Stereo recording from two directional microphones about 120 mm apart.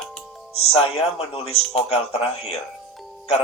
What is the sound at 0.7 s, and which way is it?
Speech, 55° left (ahead or behind).